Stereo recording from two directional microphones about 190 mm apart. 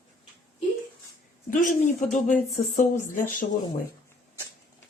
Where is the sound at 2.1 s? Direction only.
40° left (ahead or behind).